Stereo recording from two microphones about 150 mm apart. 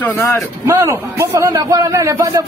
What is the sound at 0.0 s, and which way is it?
Speech, 15° left (ahead or behind).